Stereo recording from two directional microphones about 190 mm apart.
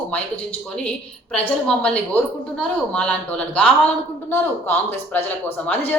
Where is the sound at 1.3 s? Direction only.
5° left (ahead or behind).